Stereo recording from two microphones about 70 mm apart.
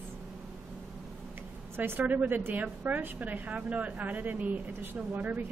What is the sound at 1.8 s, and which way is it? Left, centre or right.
A woman's voice, right.